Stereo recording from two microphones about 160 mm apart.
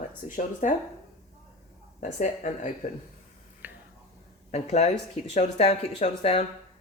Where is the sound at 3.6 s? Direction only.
10° right (ahead or behind).